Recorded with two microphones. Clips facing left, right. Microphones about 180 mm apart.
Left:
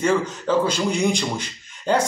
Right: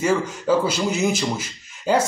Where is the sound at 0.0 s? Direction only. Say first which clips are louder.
Even; 10° right (ahead or behind).